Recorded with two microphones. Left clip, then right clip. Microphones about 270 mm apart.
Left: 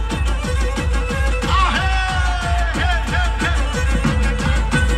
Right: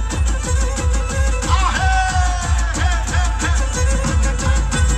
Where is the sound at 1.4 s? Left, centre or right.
Centre.